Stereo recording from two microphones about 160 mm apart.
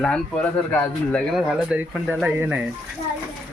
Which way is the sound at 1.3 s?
5° right (ahead or behind).